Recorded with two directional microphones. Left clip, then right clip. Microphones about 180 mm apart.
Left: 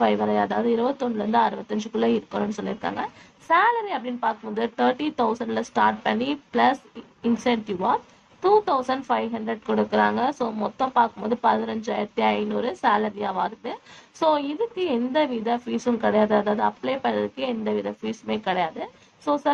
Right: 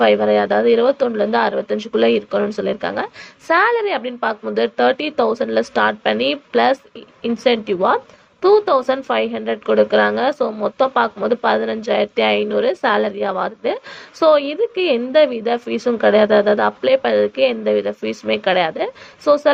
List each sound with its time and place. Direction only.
0.0 s speech: 25° right (ahead or behind)